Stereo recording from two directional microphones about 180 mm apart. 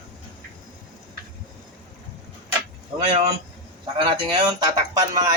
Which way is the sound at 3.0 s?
35° right (ahead or behind).